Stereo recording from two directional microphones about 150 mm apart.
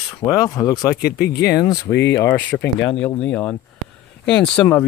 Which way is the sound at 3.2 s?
10° left (ahead or behind).